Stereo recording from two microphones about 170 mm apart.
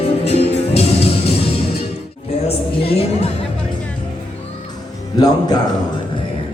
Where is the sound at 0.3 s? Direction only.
35° left (ahead or behind).